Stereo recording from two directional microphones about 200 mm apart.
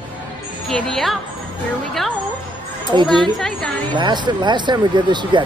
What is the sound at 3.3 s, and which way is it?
Speech, centre (ahead or behind).